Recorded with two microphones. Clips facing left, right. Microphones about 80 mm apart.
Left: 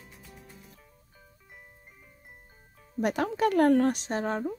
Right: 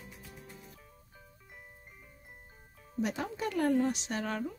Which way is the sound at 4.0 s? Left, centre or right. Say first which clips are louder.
Left 5 dB; left.